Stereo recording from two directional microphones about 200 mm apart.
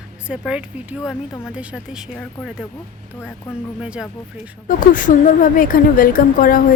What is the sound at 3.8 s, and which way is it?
Speech, 5° right (ahead or behind).